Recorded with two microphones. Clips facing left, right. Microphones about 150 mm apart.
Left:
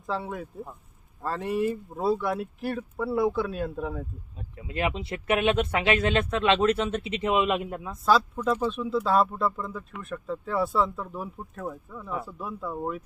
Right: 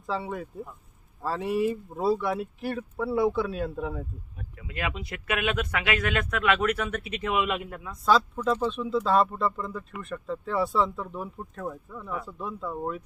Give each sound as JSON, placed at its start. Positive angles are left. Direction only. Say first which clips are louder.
{"t": 0.0, "sound": "speech", "louder": "even", "side_deg": 0}
{"t": 4.4, "sound": "speech", "louder": "left 5 dB", "side_deg": 25}
{"t": 8.4, "sound": "speech", "louder": "even", "side_deg": 5}